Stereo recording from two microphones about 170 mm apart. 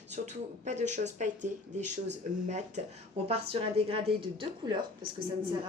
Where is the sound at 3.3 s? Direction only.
35° right (ahead or behind).